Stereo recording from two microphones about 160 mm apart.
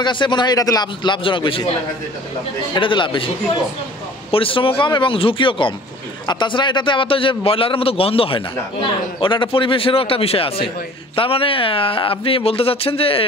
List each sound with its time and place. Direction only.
0.0 s a man's voice: 30° left (ahead or behind)
2.7 s a man's voice: 30° left (ahead or behind)
4.3 s a man's voice: 35° left (ahead or behind)